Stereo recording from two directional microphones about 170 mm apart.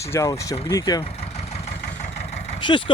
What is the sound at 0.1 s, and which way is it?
Speech, 20° left (ahead or behind).